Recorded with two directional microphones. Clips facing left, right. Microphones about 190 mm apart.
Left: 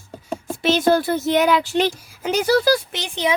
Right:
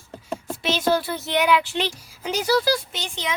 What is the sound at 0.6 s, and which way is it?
A woman's voice, 50° left (ahead or behind).